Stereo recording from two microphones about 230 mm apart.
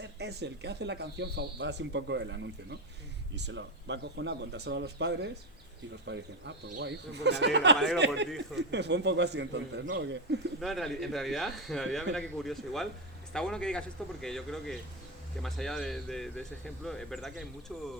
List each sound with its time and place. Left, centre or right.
0.0 s speech: right
10.6 s speech: centre